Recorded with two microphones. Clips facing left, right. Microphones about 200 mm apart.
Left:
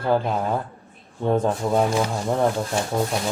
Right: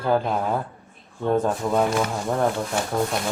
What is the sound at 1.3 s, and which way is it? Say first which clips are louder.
Speech: left 1 dB; 15° left (ahead or behind).